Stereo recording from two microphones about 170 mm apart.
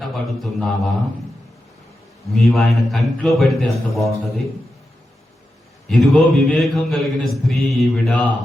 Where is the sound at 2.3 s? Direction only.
Centre (ahead or behind).